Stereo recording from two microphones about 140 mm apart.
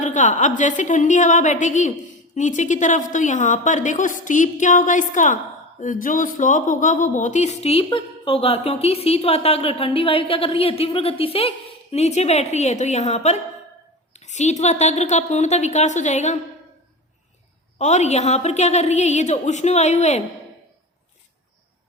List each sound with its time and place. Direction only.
0.0 s a woman's voice: 60° left (ahead or behind)
17.7 s speech: 55° left (ahead or behind)